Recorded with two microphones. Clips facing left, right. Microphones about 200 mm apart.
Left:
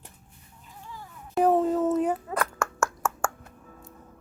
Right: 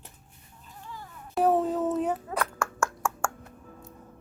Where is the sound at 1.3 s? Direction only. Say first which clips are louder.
Left 2 dB; centre (ahead or behind).